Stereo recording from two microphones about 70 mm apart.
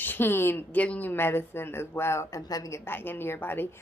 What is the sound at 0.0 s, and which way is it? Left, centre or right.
A woman's voice, left.